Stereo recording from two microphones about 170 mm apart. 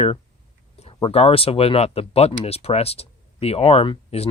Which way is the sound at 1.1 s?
35° left (ahead or behind).